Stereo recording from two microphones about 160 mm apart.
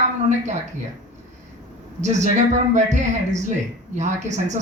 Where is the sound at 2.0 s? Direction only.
45° right (ahead or behind).